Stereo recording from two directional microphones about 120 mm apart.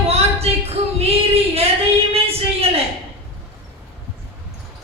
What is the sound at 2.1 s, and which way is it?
Music, 55° right (ahead or behind).